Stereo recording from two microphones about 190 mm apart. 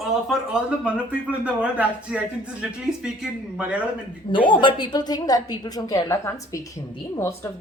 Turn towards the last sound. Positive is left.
turn(degrees=15)  # may be behind; listen again after turning